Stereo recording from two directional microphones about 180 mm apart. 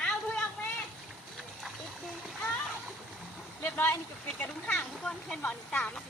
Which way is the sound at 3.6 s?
10° left (ahead or behind).